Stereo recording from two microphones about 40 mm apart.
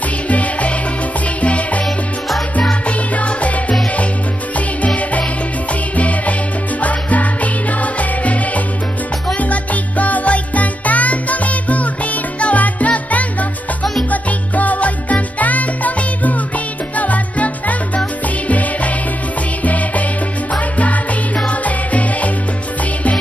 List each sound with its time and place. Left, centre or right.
0.3 s music: left
3.2 s music: left